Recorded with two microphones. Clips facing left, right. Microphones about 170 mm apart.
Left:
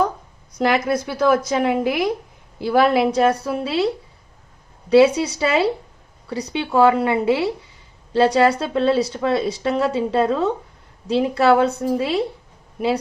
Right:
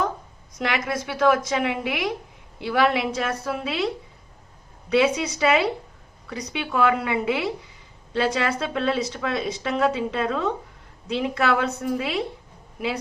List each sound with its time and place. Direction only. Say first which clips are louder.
0.6 s speech: left 7 dB; 35° left (ahead or behind)